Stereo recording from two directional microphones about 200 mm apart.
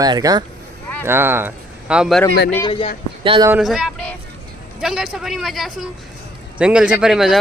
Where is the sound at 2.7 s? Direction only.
25° left (ahead or behind).